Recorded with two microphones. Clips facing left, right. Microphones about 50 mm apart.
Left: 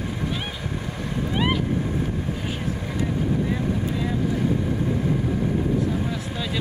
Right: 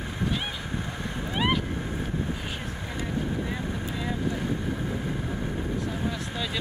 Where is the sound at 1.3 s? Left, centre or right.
Centre.